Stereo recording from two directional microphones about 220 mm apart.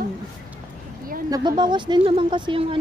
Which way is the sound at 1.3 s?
20° right (ahead or behind).